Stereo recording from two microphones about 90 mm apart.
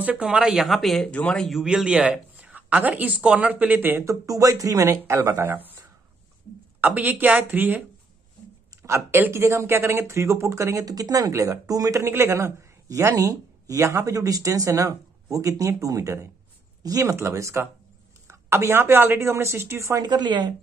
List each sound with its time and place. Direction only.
0.0 s speech: 10° right (ahead or behind); by 1.6 s 5° left (ahead or behind)
1.6 s speech: 5° right (ahead or behind)
4.0 s speech: 35° right (ahead or behind)
6.8 s a woman's voice: 20° right (ahead or behind)
8.8 s a woman's voice: 30° right (ahead or behind)
20.0 s speech: 55° right (ahead or behind)